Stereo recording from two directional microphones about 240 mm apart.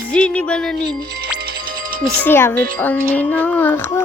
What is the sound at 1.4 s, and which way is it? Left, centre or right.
Music, right.